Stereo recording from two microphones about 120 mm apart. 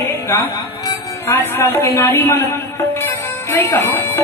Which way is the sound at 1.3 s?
20° left (ahead or behind).